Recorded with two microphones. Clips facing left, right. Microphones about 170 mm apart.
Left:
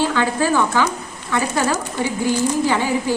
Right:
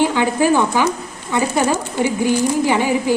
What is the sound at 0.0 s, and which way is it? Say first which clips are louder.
Speech: right 3 dB; 15° right (ahead or behind).